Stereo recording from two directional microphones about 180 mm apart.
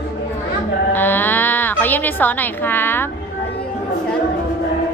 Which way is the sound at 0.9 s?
10° left (ahead or behind).